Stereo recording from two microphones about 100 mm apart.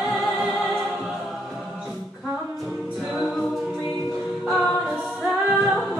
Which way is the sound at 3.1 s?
5° left (ahead or behind).